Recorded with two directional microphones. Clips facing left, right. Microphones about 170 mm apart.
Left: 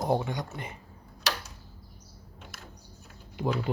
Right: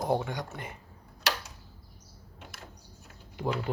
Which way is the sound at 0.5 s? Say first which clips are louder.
Left 1 dB; 55° right (ahead or behind).